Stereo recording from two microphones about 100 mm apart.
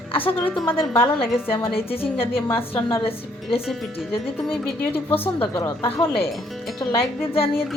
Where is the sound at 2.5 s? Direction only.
25° left (ahead or behind).